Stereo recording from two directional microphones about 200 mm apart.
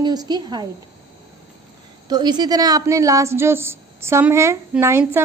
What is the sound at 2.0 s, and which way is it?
A woman's voice, 20° right (ahead or behind).